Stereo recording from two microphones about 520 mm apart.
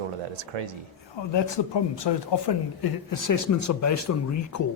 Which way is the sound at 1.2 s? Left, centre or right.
Left.